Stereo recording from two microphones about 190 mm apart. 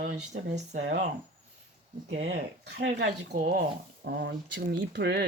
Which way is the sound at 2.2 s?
75° right (ahead or behind).